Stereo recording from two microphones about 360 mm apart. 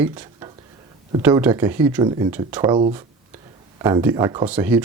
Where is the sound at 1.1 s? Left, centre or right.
Centre.